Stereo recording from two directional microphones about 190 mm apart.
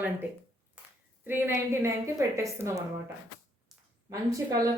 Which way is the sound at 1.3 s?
10° right (ahead or behind).